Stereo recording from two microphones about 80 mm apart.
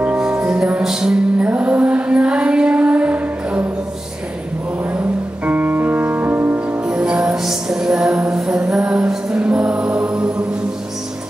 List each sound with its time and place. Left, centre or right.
0.0 s music: centre
4.9 s music: centre